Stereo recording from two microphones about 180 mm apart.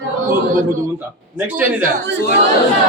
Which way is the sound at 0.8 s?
10° right (ahead or behind).